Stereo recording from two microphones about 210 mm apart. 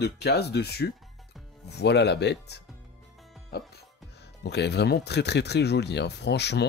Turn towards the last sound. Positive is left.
turn(degrees=55)  # may be behind; listen again after turning